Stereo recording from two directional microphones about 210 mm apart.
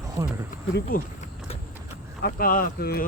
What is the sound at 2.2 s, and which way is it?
Speech, 45° left (ahead or behind).